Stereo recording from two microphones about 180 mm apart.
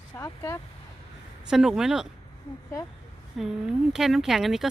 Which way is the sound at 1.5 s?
5° right (ahead or behind).